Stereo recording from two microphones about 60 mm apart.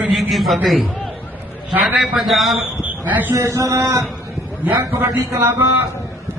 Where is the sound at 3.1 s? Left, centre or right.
Right.